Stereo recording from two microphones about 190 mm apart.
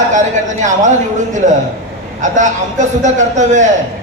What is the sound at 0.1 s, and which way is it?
A man's voice, 40° right (ahead or behind).